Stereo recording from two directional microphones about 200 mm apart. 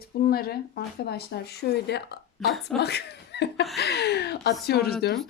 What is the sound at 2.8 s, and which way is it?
Speech, 55° left (ahead or behind).